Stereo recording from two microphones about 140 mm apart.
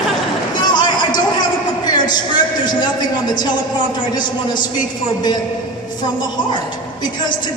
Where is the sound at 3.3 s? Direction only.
30° left (ahead or behind).